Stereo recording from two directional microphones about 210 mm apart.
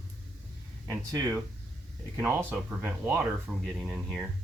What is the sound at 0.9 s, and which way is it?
Speech, 15° right (ahead or behind).